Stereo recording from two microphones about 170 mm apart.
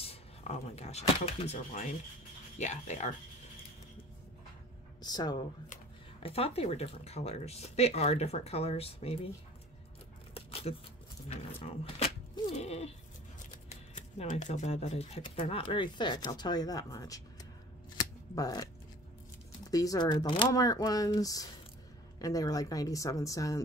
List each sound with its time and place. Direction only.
0.0 s speech: 35° left (ahead or behind)
5.0 s speech: 25° left (ahead or behind)
6.2 s speech: 35° left (ahead or behind)
10.3 s a sound: 35° left (ahead or behind)
11.2 s speech: 35° left (ahead or behind); by 17.5 s 20° left (ahead or behind)
17.9 s a sound: 20° left (ahead or behind)
19.6 s speech: 20° left (ahead or behind)